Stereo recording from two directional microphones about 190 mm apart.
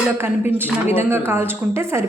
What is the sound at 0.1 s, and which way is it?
A woman's voice, 10° right (ahead or behind).